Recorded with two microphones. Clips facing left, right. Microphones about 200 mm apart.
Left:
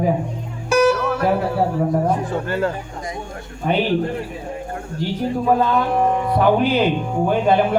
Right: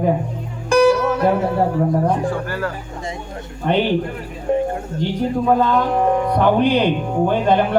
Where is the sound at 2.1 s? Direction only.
25° left (ahead or behind).